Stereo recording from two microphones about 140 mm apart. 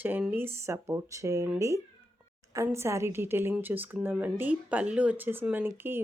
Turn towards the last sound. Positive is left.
turn(degrees=-15)  # may be behind; listen again after turning